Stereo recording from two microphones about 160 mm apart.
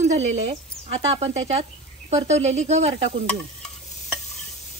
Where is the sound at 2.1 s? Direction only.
45° right (ahead or behind).